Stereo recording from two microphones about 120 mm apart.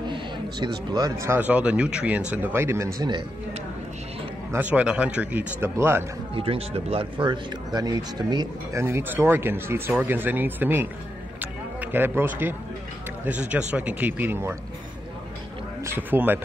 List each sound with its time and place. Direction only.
0.0 s a sound: 40° right (ahead or behind)
1.2 s speech: 15° right (ahead or behind)
3.0 s speech: 40° right (ahead or behind)
4.5 s speech: 15° right (ahead or behind)
6.3 s speech: 50° right (ahead or behind)
8.7 s speech: 20° right (ahead or behind)
15.8 s speech: 20° right (ahead or behind)